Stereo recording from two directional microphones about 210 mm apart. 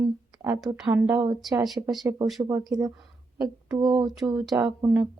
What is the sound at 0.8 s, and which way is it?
Speech, 5° right (ahead or behind).